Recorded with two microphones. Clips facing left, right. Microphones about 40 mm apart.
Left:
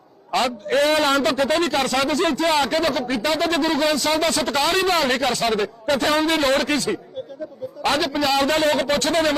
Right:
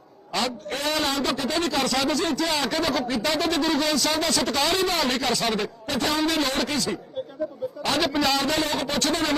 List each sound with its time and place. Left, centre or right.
0.3 s a man's voice: left
8.0 s a man's voice: centre
8.4 s a man's voice: left